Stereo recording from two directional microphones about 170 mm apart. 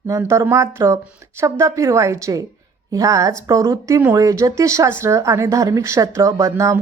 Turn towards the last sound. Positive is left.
turn(degrees=-15)  # may be behind; listen again after turning